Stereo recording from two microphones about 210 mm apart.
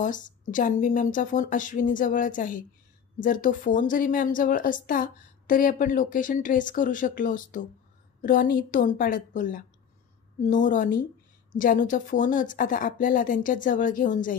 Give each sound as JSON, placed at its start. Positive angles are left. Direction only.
{"t": 0.0, "sound": "a woman's voice", "side_deg": 40}